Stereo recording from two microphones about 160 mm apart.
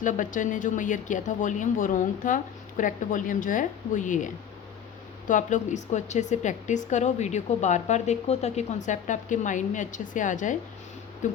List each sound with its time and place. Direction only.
0.0 s speech: 55° left (ahead or behind)
5.3 s speech: 50° left (ahead or behind)